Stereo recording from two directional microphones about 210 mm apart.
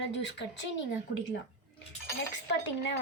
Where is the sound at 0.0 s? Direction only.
55° left (ahead or behind).